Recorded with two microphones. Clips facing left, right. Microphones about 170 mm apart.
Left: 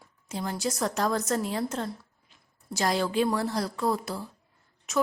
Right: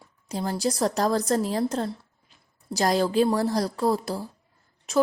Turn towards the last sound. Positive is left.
turn(degrees=-30)  # may be behind; listen again after turning